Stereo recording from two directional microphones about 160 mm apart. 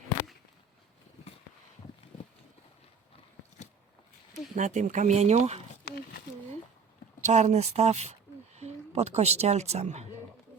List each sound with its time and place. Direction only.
4.5 s speech: 50° right (ahead or behind)
7.2 s speech: 45° right (ahead or behind)